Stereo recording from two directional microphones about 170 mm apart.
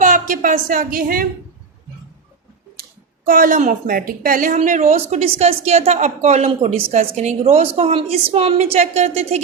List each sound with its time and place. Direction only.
0.0 s a woman's voice: 50° right (ahead or behind)
3.2 s a woman's voice: 55° right (ahead or behind); by 9.4 s 40° right (ahead or behind)